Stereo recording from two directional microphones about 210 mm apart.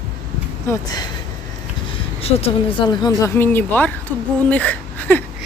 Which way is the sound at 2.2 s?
30° left (ahead or behind).